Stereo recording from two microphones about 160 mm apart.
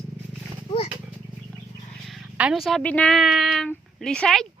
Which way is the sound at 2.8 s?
10° left (ahead or behind).